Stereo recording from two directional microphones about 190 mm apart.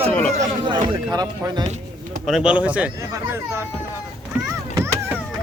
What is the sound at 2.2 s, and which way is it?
Speech, 5° right (ahead or behind).